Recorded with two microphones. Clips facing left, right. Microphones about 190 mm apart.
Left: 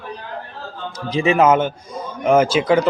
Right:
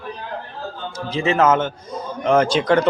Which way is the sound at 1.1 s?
15° left (ahead or behind).